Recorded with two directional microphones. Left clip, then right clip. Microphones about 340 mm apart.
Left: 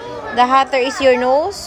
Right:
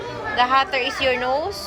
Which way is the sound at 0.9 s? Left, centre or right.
Centre.